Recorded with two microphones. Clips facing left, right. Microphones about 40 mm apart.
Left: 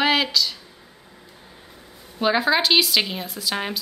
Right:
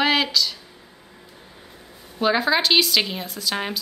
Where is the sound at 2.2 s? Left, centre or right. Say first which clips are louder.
Even; centre.